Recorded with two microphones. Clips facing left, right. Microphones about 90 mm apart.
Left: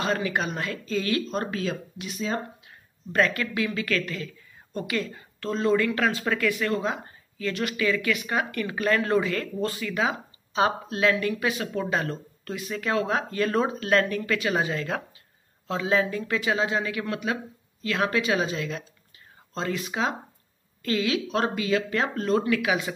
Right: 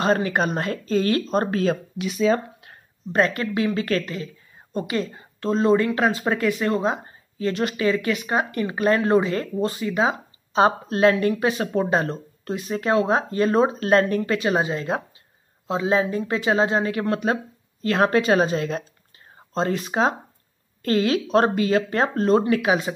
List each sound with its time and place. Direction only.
0.0 s speech: 40° right (ahead or behind)
2.0 s speech: 90° right
3.1 s speech: 30° right (ahead or behind)